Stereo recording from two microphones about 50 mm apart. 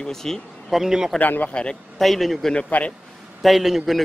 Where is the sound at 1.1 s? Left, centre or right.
Left.